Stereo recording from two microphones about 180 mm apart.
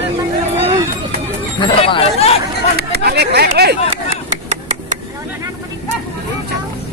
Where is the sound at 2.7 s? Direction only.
65° right (ahead or behind).